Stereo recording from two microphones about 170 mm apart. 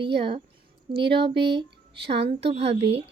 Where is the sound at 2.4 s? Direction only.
35° right (ahead or behind).